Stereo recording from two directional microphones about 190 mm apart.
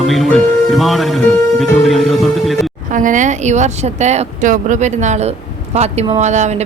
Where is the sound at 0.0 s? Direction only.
Centre (ahead or behind).